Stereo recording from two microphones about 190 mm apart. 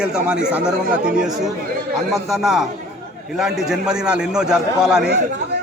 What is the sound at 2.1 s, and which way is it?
A man's voice, centre (ahead or behind).